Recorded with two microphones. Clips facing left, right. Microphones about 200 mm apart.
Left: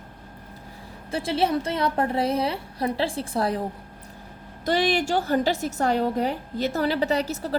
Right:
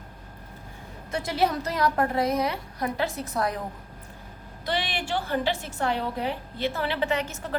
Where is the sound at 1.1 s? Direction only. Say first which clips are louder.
Left 2 dB; 30° left (ahead or behind).